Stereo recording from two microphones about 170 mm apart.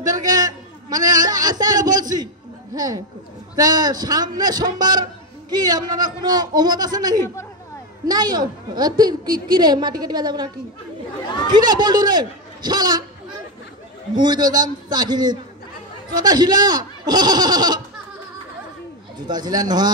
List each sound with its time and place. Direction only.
0.0 s a sound: 20° right (ahead or behind)
2.7 s a woman's voice: 20° right (ahead or behind)
11.5 s a woman's voice: 25° right (ahead or behind)
14.1 s a woman's voice: 25° right (ahead or behind)
19.1 s a woman's voice: 25° right (ahead or behind)